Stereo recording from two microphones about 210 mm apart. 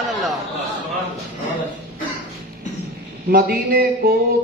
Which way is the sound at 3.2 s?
45° right (ahead or behind).